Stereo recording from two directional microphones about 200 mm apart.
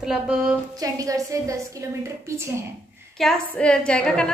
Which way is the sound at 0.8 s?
15° right (ahead or behind).